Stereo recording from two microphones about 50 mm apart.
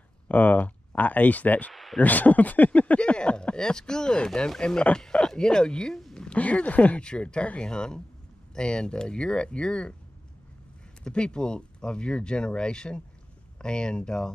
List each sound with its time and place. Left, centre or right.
0.3 s speech: left
1.7 s a sound: centre
2.0 s speech: left
3.0 s speech: left
6.1 s a sound: centre
6.4 s speech: left
7.0 s speech: centre
11.1 s speech: centre